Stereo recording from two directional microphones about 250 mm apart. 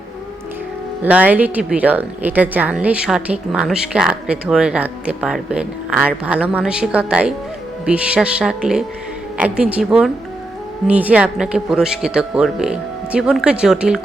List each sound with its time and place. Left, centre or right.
1.0 s speech: centre